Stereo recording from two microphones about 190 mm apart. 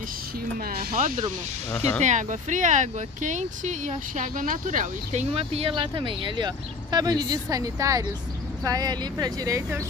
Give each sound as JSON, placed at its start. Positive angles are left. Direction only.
{"t": 0.7, "sound": "speech", "side_deg": -45}